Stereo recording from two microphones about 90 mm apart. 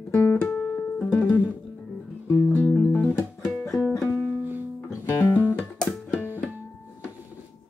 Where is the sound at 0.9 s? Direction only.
15° left (ahead or behind).